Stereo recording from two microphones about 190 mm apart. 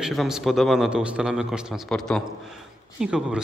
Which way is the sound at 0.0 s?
Centre (ahead or behind).